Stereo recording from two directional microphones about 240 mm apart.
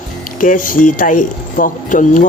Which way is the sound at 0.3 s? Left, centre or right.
Left.